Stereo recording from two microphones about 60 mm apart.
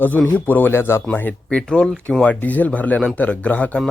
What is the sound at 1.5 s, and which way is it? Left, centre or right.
Speech, centre.